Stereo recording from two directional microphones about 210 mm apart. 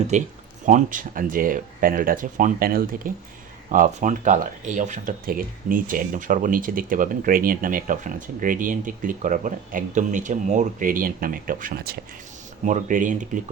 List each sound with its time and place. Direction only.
0.1 s speech: 35° right (ahead or behind)